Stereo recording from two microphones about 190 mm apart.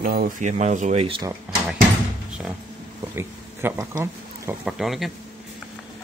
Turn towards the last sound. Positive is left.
turn(degrees=0)  # may be behind; listen again after turning